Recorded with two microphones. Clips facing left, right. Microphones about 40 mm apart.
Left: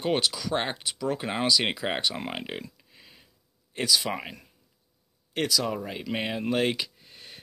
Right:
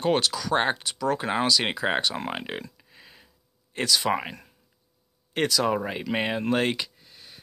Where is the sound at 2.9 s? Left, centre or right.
Centre.